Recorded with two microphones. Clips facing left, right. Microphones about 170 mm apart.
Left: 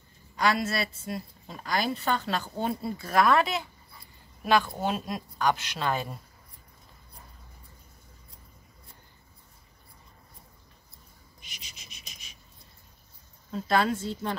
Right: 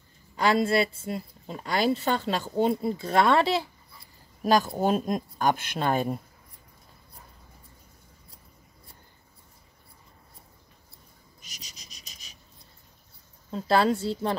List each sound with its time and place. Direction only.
0.4 s a woman's voice: 30° right (ahead or behind)
4.4 s speech: 40° right (ahead or behind)
11.4 s insect: 40° right (ahead or behind)
13.5 s speech: 30° right (ahead or behind)